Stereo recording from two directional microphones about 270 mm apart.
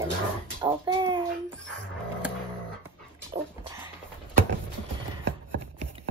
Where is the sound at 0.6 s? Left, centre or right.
Centre.